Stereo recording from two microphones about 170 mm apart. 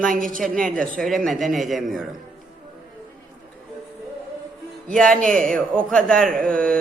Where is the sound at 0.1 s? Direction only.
50° right (ahead or behind).